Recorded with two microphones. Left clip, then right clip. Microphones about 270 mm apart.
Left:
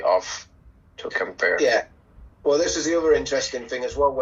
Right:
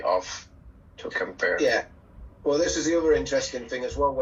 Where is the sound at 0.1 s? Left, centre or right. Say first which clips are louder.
Left 3 dB; centre.